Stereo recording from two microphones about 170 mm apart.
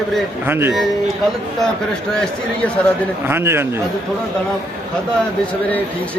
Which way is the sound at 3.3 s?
15° right (ahead or behind).